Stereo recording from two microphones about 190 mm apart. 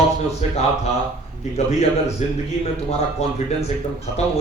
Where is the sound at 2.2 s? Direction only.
35° left (ahead or behind).